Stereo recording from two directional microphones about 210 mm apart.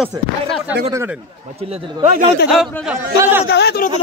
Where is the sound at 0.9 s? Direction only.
15° right (ahead or behind).